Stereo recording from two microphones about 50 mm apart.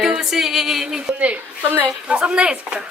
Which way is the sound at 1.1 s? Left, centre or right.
Right.